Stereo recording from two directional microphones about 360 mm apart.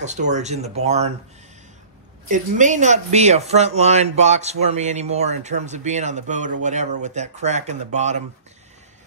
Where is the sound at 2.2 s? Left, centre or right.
Right.